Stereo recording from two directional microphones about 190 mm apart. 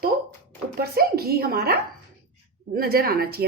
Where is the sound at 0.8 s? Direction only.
55° right (ahead or behind).